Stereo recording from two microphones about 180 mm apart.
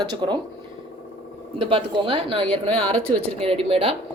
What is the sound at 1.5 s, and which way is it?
Speech, 30° right (ahead or behind).